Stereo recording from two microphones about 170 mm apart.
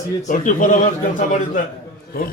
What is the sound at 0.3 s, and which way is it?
A man's voice, 50° left (ahead or behind).